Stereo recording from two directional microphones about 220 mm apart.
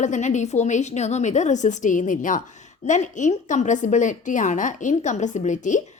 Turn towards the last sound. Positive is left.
turn(degrees=35)  # may be behind; listen again after turning